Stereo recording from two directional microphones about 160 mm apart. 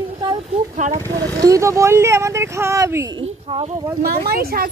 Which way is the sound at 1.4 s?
20° right (ahead or behind).